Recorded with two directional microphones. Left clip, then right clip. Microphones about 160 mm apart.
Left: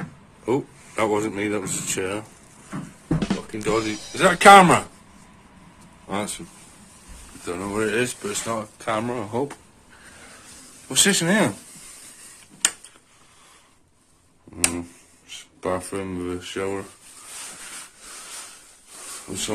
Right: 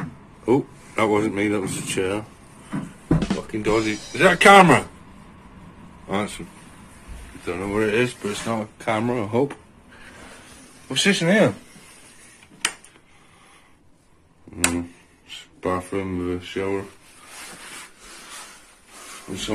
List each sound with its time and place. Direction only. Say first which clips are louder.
0.5 s speech: right 4 dB; centre (ahead or behind)
6.0 s speech: right 2 dB; 15° left (ahead or behind)
7.4 s speech: right 2 dB; 15° left (ahead or behind)
7.7 s speech: right 3 dB; centre (ahead or behind)
10.9 s speech: right 1 dB; 10° left (ahead or behind)
15.6 s speech: right 2 dB; centre (ahead or behind)